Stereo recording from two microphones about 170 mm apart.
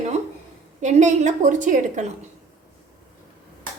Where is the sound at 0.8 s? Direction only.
45° right (ahead or behind).